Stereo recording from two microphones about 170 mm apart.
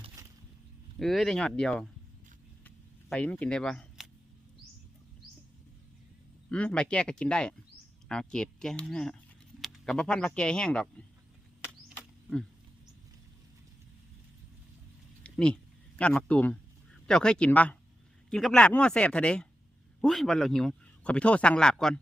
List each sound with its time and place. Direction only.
0.2 s a sound: 20° right (ahead or behind)
0.9 s speech: centre (ahead or behind)
2.6 s camera: 10° left (ahead or behind)
6.5 s speech: 5° left (ahead or behind)
11.9 s cricket: 5° left (ahead or behind)
15.2 s a sound: 5° left (ahead or behind)
16.0 s speech: 5° left (ahead or behind)